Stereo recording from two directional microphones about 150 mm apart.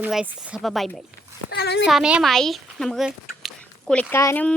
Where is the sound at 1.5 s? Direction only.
90° left.